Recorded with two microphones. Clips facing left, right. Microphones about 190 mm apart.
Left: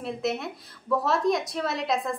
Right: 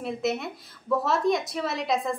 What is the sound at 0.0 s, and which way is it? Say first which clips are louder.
A woman's voice: right 1 dB; centre (ahead or behind).